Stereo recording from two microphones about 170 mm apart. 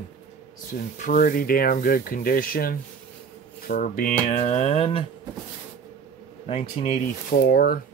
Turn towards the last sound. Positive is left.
turn(degrees=65)  # may be behind; listen again after turning